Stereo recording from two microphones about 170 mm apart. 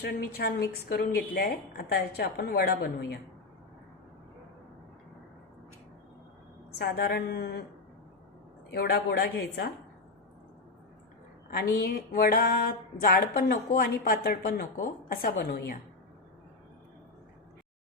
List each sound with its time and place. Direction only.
0.0 s speech: 70° left (ahead or behind)
6.7 s speech: 70° left (ahead or behind)
8.7 s speech: 70° left (ahead or behind)
11.5 s a sound: 65° left (ahead or behind)